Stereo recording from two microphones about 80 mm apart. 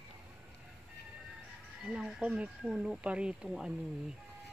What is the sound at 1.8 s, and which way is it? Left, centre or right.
Speech, centre.